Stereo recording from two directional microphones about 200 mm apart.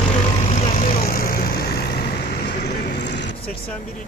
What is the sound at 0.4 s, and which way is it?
Vehicle, 40° left (ahead or behind).